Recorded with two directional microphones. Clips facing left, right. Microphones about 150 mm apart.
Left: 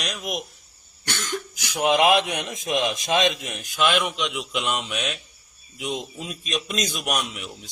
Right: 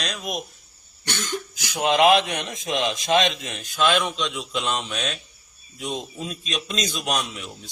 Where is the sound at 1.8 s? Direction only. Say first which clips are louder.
Right 1 dB; 10° left (ahead or behind).